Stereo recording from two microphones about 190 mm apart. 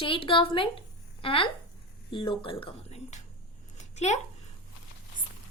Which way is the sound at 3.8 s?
40° left (ahead or behind).